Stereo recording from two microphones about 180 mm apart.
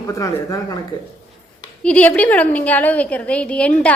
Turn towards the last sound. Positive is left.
turn(degrees=5)  # may be behind; listen again after turning